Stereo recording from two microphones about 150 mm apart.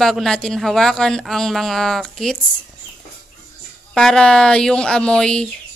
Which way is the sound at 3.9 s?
5° left (ahead or behind).